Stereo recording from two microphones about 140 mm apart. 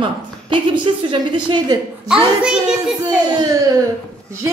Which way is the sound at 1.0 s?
35° right (ahead or behind).